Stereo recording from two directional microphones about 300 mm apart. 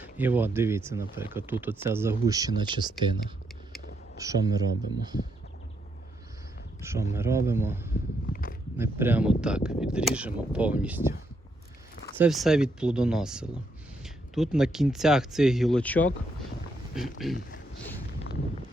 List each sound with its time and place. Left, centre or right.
0.0 s speech: centre
6.8 s speech: centre
8.3 s speech: left
8.8 s speech: centre
12.1 s speech: centre
17.3 s a sound: left